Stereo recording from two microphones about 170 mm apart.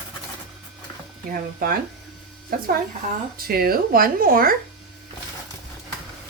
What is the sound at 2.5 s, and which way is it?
Speech, 60° right (ahead or behind).